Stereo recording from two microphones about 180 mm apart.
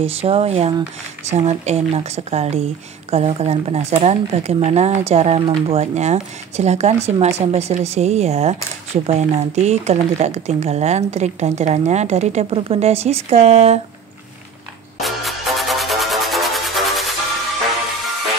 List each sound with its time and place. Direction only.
0.0 s speech: 35° right (ahead or behind)
15.0 s music: centre (ahead or behind)